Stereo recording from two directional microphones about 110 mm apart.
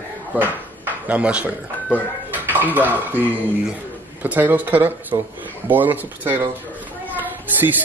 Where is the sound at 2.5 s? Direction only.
15° right (ahead or behind).